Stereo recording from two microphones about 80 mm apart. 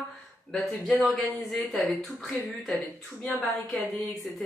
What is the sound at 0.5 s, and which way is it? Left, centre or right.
Speech, centre.